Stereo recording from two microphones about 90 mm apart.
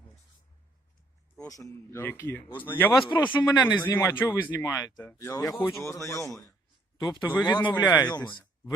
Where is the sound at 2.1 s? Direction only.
25° left (ahead or behind).